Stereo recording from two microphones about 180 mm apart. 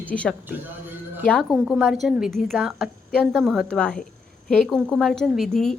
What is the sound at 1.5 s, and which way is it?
A woman's voice, 5° right (ahead or behind).